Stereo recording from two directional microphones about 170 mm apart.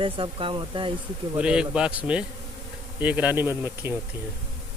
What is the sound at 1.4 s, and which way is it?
Speech, 5° right (ahead or behind).